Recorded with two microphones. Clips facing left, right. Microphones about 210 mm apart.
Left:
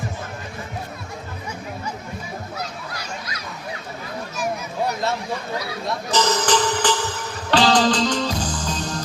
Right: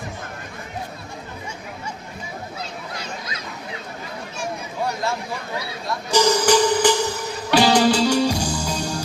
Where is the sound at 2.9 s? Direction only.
25° right (ahead or behind).